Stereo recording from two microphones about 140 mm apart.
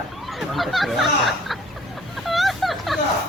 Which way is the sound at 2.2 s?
Centre (ahead or behind).